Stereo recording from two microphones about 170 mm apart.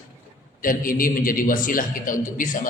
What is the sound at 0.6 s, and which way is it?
A man's voice, 55° left (ahead or behind).